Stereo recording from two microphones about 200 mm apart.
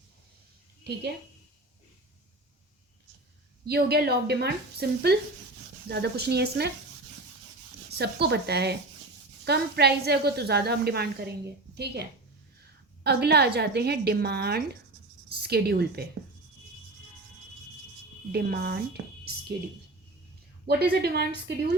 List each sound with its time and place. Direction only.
3.7 s a woman's voice: 50° right (ahead or behind)
7.9 s a woman's voice: 55° right (ahead or behind)
18.3 s a woman's voice: 50° right (ahead or behind)
19.0 s a sound: 55° right (ahead or behind)
20.7 s a woman's voice: 50° right (ahead or behind)